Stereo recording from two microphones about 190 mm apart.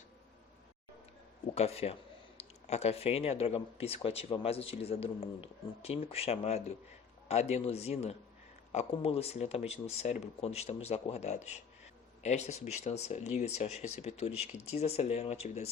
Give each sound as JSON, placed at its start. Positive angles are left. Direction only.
{"t": 1.5, "sound": "speech", "side_deg": 35}